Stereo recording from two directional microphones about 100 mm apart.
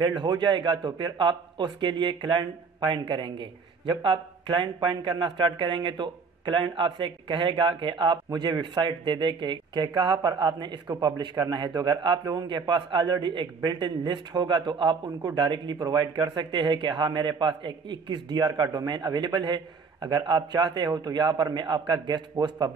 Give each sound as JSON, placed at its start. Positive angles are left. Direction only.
{"t": 0.2, "sound": "speech", "side_deg": -50}